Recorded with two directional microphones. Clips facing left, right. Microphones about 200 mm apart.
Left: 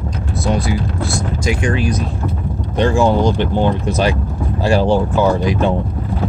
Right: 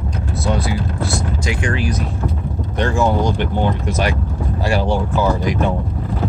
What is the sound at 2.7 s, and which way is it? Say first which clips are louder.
Speech: left 4 dB; 30° left (ahead or behind).